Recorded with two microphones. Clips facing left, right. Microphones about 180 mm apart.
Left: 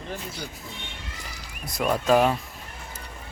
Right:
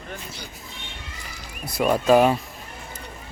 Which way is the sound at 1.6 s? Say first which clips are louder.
Right 4 dB; 5° right (ahead or behind).